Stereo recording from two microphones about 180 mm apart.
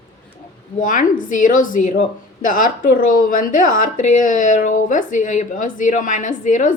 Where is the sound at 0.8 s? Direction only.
45° left (ahead or behind).